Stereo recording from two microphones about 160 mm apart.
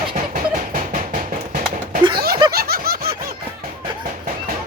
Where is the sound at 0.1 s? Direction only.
55° right (ahead or behind).